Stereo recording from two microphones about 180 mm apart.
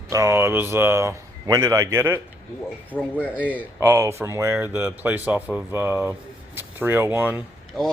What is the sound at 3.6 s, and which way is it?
Speech, 10° right (ahead or behind).